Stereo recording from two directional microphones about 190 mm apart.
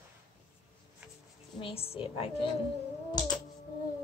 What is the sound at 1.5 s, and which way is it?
Speech, 30° left (ahead or behind).